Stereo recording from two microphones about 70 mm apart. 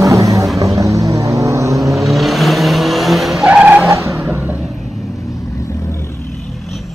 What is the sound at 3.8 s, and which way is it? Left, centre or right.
Vehicle, right.